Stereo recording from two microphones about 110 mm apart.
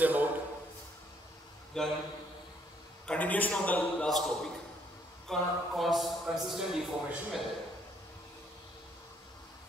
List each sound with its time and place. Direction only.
0.0 s a man's voice: 15° right (ahead or behind)
1.8 s a man's voice: 5° left (ahead or behind)
3.1 s a man's voice: 15° left (ahead or behind)